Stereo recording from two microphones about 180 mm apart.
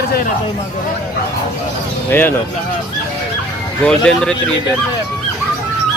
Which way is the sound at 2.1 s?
10° left (ahead or behind).